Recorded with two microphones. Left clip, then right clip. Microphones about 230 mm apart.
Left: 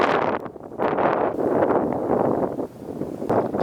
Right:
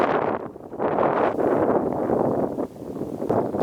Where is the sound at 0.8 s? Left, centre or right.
Centre.